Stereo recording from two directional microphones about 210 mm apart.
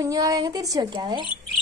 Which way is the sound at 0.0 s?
15° right (ahead or behind).